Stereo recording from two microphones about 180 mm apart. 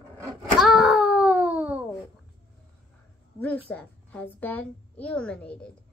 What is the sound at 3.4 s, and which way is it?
A woman's voice, 10° left (ahead or behind).